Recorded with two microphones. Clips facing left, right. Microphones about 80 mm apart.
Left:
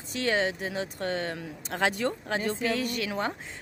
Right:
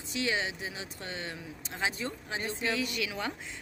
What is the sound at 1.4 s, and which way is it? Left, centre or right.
Speech, left.